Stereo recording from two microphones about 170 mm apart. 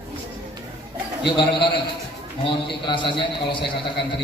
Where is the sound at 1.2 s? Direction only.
30° left (ahead or behind).